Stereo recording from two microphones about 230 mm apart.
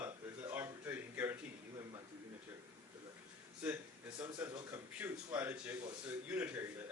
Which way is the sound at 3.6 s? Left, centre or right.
Centre.